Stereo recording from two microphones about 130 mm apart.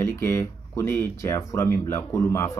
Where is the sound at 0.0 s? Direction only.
20° left (ahead or behind).